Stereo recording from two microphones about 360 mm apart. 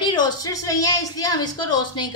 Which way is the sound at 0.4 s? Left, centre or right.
Centre.